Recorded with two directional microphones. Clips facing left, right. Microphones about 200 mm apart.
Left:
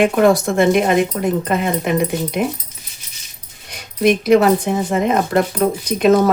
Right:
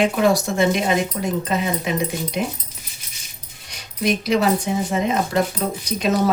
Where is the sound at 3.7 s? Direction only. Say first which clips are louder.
Left 7 dB; 55° left (ahead or behind).